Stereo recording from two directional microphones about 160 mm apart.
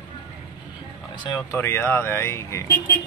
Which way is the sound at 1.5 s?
15° left (ahead or behind).